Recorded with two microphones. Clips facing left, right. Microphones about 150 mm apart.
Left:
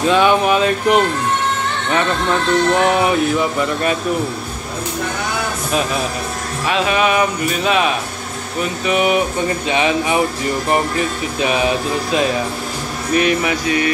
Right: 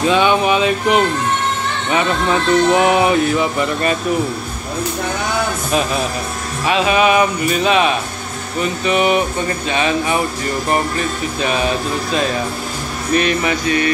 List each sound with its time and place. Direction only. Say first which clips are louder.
0.0 s speech: even; centre (ahead or behind)
6.7 s speech: right 2 dB; 5° right (ahead or behind); by 10.2 s 15° left (ahead or behind)
11.4 s speech: left 2 dB; 10° left (ahead or behind)